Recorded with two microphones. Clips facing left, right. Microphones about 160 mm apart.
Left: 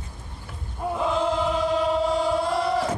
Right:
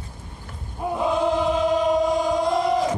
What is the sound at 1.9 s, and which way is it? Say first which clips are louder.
Chant: right 2 dB; 15° right (ahead or behind).